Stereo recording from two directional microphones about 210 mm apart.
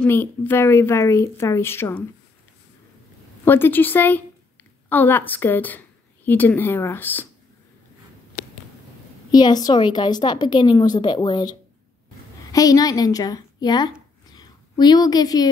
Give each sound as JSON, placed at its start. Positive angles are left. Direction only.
{"t": 0.0, "sound": "a woman's voice", "side_deg": 10}
{"t": 3.4, "sound": "a woman's voice", "side_deg": 10}
{"t": 9.3, "sound": "a woman's voice", "side_deg": 20}
{"t": 12.5, "sound": "a woman's voice", "side_deg": 15}
{"t": 14.3, "sound": "a sound", "side_deg": 20}